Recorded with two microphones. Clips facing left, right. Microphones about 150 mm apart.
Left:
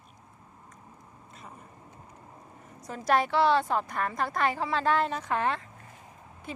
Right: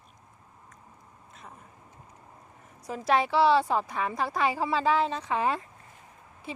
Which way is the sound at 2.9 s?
5° right (ahead or behind).